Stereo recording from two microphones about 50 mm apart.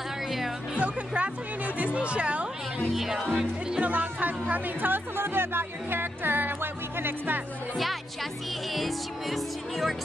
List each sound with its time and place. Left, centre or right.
0.7 s speech: right
2.9 s music: centre
3.3 s speech: centre
3.8 s speech: right
7.7 s music: centre